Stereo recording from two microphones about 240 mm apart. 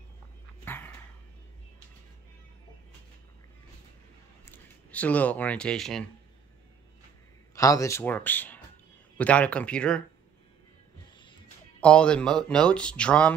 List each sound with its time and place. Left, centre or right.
0.7 s dog: centre
4.5 s speech: centre
7.5 s speech: centre
11.8 s speech: centre